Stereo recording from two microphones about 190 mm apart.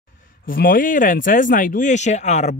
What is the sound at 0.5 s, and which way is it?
A woman's voice, 50° left (ahead or behind).